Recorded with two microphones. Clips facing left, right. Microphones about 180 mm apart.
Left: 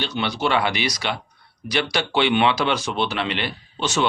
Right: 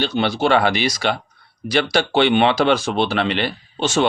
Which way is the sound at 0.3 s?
35° right (ahead or behind).